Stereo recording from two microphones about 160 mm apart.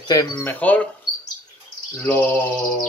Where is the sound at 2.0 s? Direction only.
15° left (ahead or behind).